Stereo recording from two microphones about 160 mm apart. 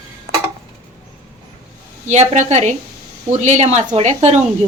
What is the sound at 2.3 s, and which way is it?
Speech, 45° right (ahead or behind).